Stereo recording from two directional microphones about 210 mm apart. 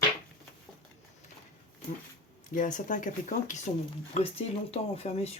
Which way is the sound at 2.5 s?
40° left (ahead or behind).